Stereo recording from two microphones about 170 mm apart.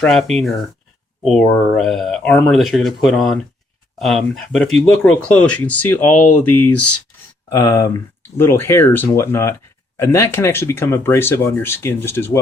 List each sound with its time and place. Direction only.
0.0 s speech: 5° left (ahead or behind)
7.5 s speech: 15° left (ahead or behind)